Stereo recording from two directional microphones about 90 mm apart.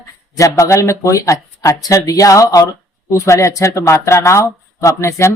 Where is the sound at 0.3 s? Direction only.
35° left (ahead or behind).